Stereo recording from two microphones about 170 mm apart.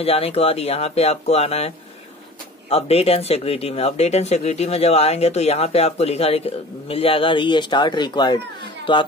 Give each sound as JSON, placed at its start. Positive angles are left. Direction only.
{"t": 0.0, "sound": "speech", "side_deg": 35}
{"t": 2.7, "sound": "speech", "side_deg": 35}